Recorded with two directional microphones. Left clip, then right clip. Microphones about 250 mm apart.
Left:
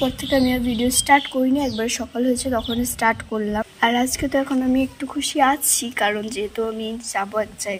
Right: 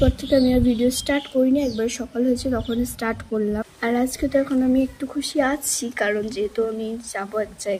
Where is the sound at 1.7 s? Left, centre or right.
Left.